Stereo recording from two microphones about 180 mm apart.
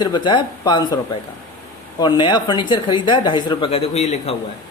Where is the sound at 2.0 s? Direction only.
25° left (ahead or behind).